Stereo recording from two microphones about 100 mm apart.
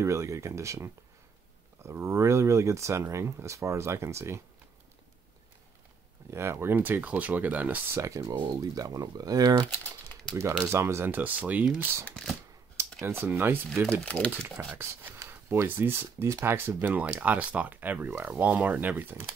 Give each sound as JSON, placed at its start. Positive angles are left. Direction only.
{"t": 0.0, "sound": "speech", "side_deg": -30}
{"t": 6.3, "sound": "speech", "side_deg": -25}
{"t": 8.0, "sound": "speech", "side_deg": -30}
{"t": 9.7, "sound": "typing", "side_deg": 15}
{"t": 10.7, "sound": "speech", "side_deg": -25}
{"t": 12.0, "sound": "speech", "side_deg": 10}
{"t": 13.0, "sound": "speech", "side_deg": -20}
{"t": 14.0, "sound": "speech", "side_deg": 15}
{"t": 14.3, "sound": "speech", "side_deg": -25}